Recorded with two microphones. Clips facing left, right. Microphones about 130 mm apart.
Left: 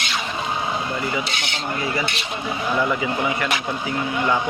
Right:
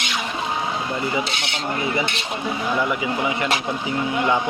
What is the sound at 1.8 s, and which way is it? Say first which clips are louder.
Speech: right 1 dB; 20° right (ahead or behind).